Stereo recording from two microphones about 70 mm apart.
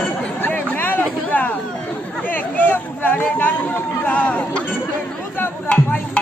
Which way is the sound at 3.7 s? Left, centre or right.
Left.